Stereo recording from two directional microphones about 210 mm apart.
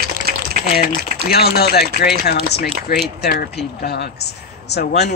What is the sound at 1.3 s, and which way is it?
Speech, 50° left (ahead or behind).